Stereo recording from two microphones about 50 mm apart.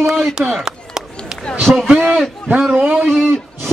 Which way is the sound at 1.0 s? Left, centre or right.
Centre.